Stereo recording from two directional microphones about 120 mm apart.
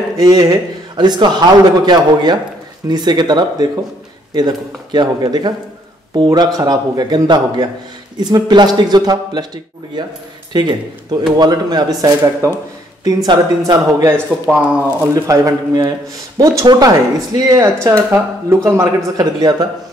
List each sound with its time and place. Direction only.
0.2 s speech: 30° right (ahead or behind)
10.5 s speech: 40° right (ahead or behind)
14.5 s speech: 10° right (ahead or behind)
15.1 s speech: 30° right (ahead or behind)